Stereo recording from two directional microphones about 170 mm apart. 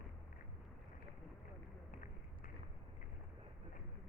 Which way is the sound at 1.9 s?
55° left (ahead or behind).